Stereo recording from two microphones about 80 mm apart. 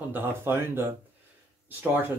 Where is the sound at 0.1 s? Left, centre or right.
Right.